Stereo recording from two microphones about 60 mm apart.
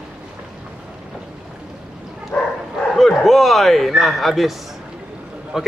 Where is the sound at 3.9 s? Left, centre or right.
Centre.